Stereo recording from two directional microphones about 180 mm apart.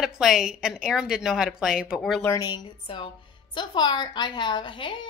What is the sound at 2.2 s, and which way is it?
A woman's voice, 20° left (ahead or behind).